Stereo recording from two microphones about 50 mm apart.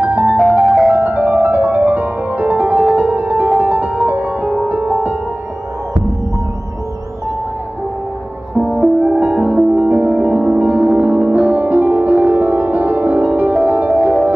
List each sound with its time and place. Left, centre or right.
0.0 s music: right
0.7 s music: centre
0.9 s music: right
8.7 s music: centre
9.2 s music: right
9.8 s music: right